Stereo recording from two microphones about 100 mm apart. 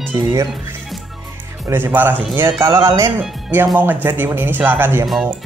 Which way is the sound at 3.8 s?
20° right (ahead or behind).